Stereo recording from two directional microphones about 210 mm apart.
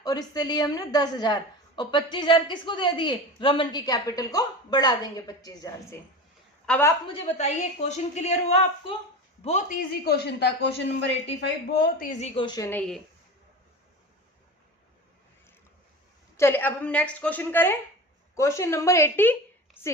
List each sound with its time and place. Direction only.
0.0 s a woman's voice: 20° left (ahead or behind)
7.1 s a woman's voice: 30° left (ahead or behind)
10.0 s speech: 50° left (ahead or behind)
11.9 s a woman's voice: 40° left (ahead or behind)
12.3 s a woman's voice: 20° left (ahead or behind)
16.4 s a woman's voice: 10° left (ahead or behind)